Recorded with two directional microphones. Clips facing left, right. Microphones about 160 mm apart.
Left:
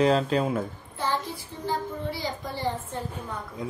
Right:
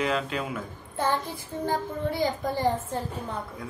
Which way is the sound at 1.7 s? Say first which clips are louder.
Right 1 dB; 50° right (ahead or behind).